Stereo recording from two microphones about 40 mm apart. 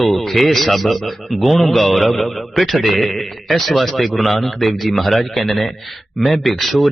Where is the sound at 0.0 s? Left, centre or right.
Centre.